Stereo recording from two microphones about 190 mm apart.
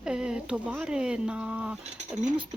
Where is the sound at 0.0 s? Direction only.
5° right (ahead or behind).